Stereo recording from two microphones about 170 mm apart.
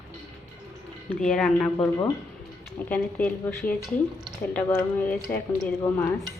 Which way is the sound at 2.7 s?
10° left (ahead or behind).